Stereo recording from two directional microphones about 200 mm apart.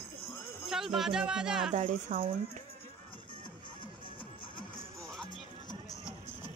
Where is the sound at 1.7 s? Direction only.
40° right (ahead or behind).